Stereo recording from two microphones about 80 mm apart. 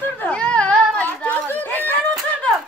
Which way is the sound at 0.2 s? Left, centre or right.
Centre.